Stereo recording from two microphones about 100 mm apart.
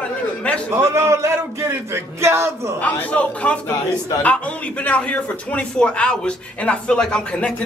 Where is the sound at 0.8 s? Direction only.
30° right (ahead or behind).